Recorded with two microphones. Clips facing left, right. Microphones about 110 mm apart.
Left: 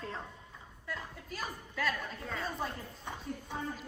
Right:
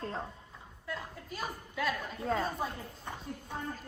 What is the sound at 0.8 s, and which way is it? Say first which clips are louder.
A woman's voice: right 2 dB; centre (ahead or behind).